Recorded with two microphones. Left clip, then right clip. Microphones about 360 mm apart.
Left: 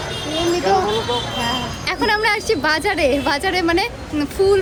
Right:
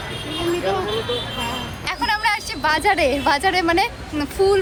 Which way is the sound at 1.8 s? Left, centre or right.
Centre.